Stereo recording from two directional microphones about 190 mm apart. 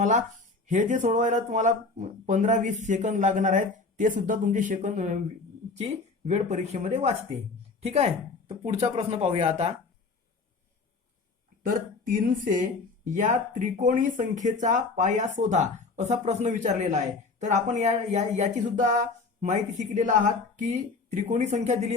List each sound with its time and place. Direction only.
0.0 s speech: 40° right (ahead or behind)
11.6 s speech: 45° right (ahead or behind)